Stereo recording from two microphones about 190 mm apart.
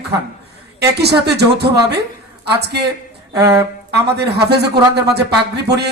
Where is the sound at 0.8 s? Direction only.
60° right (ahead or behind).